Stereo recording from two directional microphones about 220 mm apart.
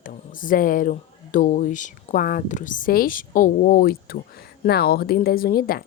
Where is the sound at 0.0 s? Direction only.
40° left (ahead or behind).